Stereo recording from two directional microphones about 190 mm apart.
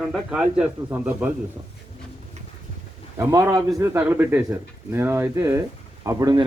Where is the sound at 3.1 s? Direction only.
15° right (ahead or behind).